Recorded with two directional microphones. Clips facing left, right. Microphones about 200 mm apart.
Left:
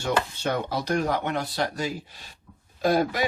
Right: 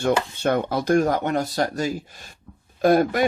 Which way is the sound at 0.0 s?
55° right (ahead or behind).